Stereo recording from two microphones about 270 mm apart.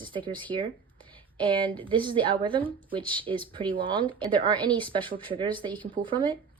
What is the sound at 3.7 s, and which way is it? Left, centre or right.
Speech, centre.